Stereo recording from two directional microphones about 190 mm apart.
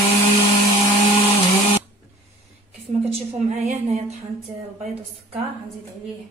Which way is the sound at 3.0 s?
35° right (ahead or behind).